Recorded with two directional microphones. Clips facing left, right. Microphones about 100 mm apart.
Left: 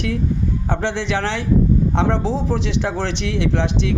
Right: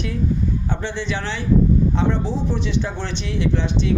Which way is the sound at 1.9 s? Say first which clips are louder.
Left 2 dB; 90° left.